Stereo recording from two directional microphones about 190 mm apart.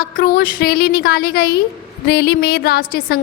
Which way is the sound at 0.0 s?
50° left (ahead or behind).